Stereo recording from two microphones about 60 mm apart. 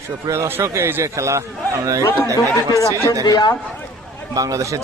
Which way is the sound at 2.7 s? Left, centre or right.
Left.